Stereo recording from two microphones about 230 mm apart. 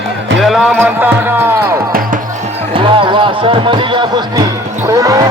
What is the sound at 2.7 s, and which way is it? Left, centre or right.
Music, right.